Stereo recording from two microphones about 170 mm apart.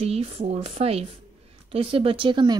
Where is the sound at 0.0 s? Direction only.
35° right (ahead or behind).